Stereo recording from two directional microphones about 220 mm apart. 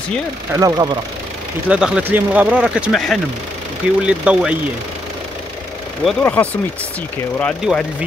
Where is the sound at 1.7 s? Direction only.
5° right (ahead or behind).